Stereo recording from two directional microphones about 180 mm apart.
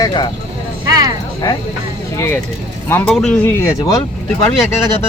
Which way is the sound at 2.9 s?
10° left (ahead or behind).